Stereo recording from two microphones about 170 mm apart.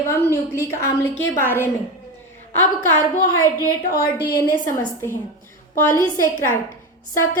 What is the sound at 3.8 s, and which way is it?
Speech, 55° left (ahead or behind).